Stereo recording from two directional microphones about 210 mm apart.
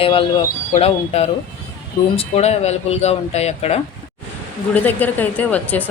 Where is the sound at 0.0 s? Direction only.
25° left (ahead or behind).